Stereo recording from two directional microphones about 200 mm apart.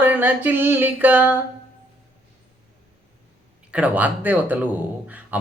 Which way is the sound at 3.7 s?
5° right (ahead or behind).